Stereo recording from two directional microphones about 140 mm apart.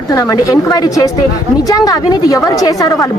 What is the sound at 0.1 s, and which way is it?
A woman's voice, 25° left (ahead or behind).